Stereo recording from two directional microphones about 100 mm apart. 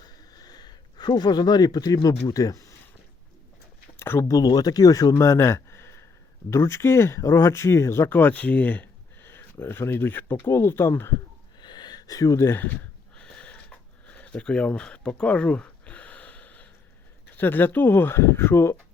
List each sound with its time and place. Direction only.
0.0 s a sound: 40° left (ahead or behind)
3.9 s speech: 25° left (ahead or behind)
11.6 s a sound: 45° left (ahead or behind)
12.5 s speech: 20° left (ahead or behind)
13.1 s sniff: 10° left (ahead or behind)
17.3 s speech: 20° left (ahead or behind)